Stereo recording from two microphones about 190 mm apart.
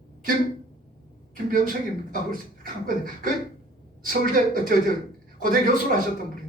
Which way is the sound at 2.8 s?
45° right (ahead or behind).